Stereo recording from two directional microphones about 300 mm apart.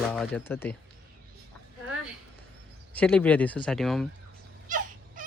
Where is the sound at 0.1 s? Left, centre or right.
Centre.